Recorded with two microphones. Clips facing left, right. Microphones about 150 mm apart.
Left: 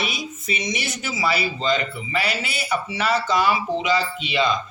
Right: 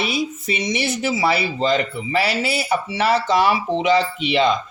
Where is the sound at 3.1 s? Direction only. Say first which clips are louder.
Right 3 dB; 65° right (ahead or behind).